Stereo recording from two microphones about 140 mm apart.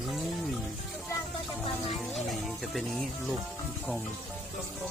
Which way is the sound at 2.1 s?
Centre (ahead or behind).